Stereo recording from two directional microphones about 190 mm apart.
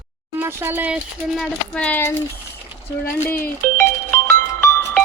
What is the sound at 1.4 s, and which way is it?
Speech, 5° left (ahead or behind).